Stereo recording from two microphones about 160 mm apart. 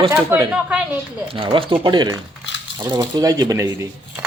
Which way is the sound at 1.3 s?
35° right (ahead or behind).